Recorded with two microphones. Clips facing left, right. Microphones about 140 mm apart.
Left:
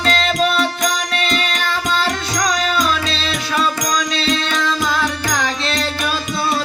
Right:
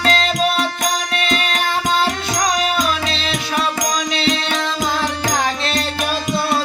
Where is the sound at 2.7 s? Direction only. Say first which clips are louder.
Left 1 dB; 20° right (ahead or behind).